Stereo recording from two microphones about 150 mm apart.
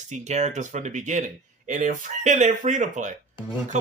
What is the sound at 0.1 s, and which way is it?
Speech, 50° right (ahead or behind).